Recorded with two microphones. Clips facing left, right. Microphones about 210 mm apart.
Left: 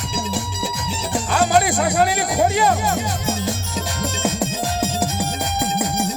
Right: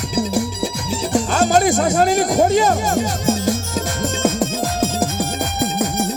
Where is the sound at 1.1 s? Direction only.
45° right (ahead or behind).